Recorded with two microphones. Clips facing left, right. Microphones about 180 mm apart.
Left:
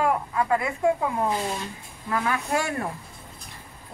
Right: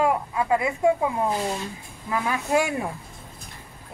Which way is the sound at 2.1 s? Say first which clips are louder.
Right 2 dB; 15° right (ahead or behind).